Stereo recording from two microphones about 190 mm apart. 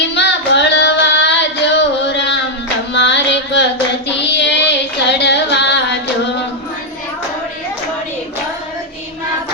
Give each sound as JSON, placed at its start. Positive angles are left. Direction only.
{"t": 0.1, "sound": "child singing", "side_deg": 65}
{"t": 2.9, "sound": "music", "side_deg": 65}
{"t": 4.3, "sound": "female singing", "side_deg": 65}